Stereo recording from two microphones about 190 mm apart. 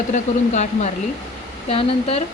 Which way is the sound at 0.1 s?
40° left (ahead or behind).